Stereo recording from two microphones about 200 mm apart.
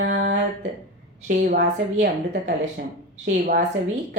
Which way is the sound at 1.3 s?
55° right (ahead or behind).